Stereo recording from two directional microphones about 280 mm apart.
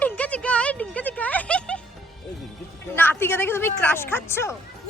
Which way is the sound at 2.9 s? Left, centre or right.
Centre.